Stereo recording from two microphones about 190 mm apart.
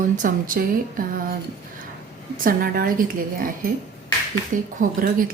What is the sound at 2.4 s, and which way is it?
A woman's voice, 50° right (ahead or behind).